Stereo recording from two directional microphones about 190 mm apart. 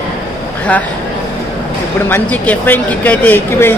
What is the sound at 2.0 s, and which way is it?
Speech, 10° left (ahead or behind).